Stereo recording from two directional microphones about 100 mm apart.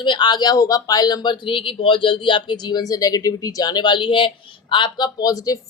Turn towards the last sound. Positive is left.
turn(degrees=35)  # may be behind; listen again after turning